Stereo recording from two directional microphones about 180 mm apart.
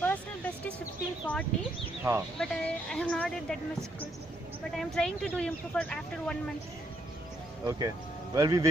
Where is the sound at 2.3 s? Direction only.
5° left (ahead or behind).